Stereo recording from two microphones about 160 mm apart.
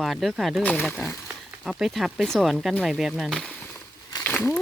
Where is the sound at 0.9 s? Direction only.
15° left (ahead or behind).